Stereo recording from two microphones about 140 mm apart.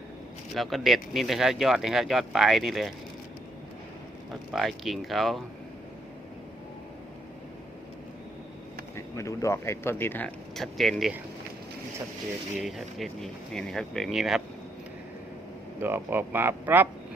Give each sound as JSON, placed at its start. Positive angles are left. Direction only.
{"t": 0.5, "sound": "speech", "side_deg": 0}
{"t": 4.5, "sound": "speech", "side_deg": 0}
{"t": 9.0, "sound": "speech", "side_deg": 20}
{"t": 12.6, "sound": "speech", "side_deg": 0}
{"t": 15.8, "sound": "speech", "side_deg": -15}